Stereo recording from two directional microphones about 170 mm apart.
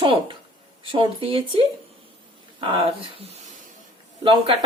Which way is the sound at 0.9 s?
30° right (ahead or behind).